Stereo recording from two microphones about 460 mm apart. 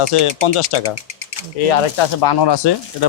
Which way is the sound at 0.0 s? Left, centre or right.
Left.